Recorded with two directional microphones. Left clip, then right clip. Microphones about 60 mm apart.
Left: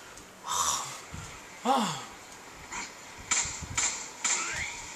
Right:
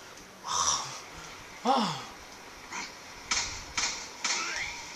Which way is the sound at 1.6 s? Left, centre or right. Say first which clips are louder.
Even; right.